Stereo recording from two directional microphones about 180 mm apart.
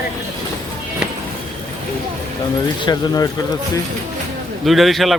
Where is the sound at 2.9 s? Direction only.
20° left (ahead or behind).